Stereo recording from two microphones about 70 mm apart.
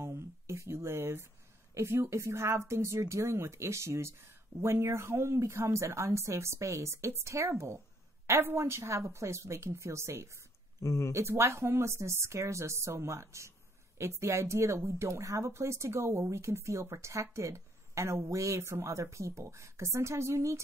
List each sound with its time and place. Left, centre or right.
0.0 s a sound: right
1.8 s speech: right
10.8 s speech: left
11.1 s speech: right